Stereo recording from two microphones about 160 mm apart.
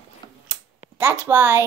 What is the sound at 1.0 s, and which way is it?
Speech, 15° right (ahead or behind).